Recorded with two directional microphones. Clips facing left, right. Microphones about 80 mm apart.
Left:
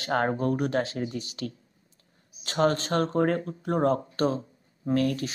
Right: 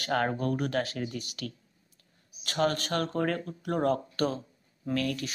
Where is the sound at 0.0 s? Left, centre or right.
Left.